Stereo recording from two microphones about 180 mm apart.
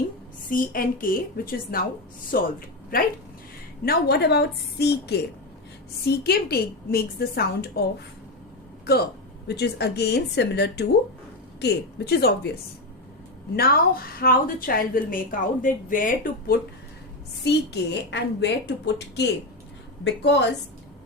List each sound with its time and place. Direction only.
0.5 s a woman's voice: 50° left (ahead or behind)
3.8 s a woman's voice: 65° left (ahead or behind)
9.5 s a woman's voice: 65° left (ahead or behind)
13.6 s a woman's voice: 55° left (ahead or behind)
17.4 s a woman's voice: 70° left (ahead or behind)